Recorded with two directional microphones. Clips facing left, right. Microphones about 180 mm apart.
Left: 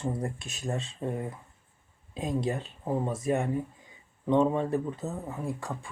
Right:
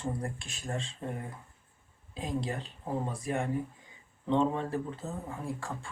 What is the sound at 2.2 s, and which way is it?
Speech, 20° left (ahead or behind).